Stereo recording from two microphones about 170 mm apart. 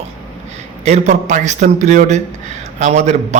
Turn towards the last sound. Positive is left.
turn(degrees=-40)  # may be behind; listen again after turning